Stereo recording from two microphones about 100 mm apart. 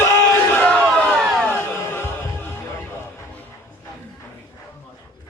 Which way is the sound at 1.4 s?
25° left (ahead or behind).